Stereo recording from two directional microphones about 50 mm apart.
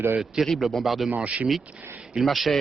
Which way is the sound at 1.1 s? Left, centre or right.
Right.